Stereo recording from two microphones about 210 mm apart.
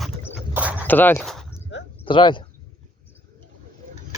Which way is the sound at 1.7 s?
60° left (ahead or behind).